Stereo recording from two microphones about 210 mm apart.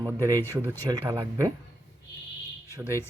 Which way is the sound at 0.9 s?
15° right (ahead or behind).